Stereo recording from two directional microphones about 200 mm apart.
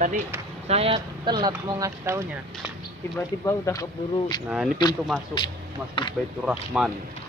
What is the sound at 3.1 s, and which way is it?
Speech, 15° left (ahead or behind).